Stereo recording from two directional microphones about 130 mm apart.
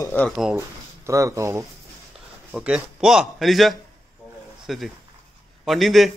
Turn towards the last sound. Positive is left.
turn(degrees=0)  # may be behind; listen again after turning